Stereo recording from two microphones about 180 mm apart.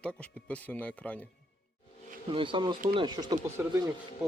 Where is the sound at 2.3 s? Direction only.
25° right (ahead or behind).